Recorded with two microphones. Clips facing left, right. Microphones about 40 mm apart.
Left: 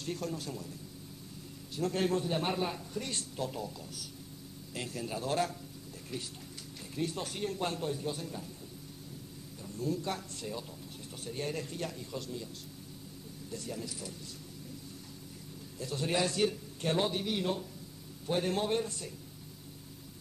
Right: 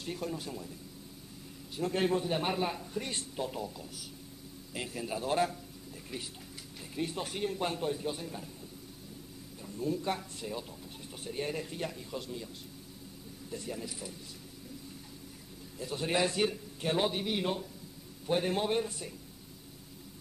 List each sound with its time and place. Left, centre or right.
0.0 s a man's voice: centre
1.8 s a man's voice: centre
9.6 s a man's voice: centre
13.5 s a man's voice: centre
15.8 s a man's voice: centre